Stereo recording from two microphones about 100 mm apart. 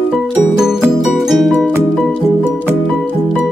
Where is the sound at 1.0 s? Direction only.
Centre (ahead or behind).